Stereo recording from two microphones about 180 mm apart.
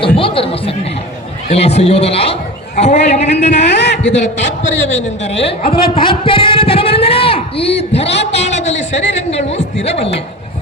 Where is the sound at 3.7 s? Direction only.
75° left (ahead or behind); by 5.0 s 90° left.